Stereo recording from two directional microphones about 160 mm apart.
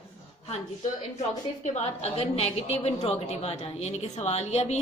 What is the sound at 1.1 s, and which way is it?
A woman's voice, 45° left (ahead or behind).